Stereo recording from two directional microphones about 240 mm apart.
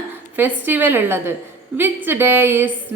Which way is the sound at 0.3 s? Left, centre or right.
Centre.